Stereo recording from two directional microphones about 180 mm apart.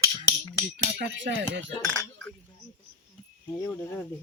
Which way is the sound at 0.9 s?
75° right (ahead or behind).